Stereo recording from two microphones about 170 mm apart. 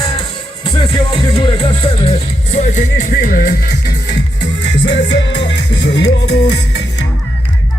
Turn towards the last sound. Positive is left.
turn(degrees=80)